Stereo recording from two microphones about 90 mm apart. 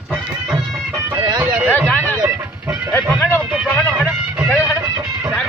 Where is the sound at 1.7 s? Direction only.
20° left (ahead or behind).